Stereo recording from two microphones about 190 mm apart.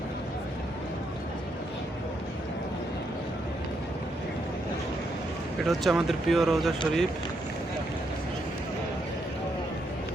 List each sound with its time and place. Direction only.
5.6 s speech: centre (ahead or behind)